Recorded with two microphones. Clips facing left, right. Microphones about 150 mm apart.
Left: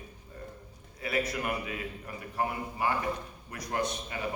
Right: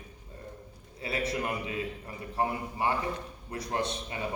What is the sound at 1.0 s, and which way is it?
A man's voice, 30° right (ahead or behind).